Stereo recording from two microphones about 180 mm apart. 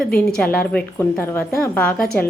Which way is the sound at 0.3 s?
5° left (ahead or behind).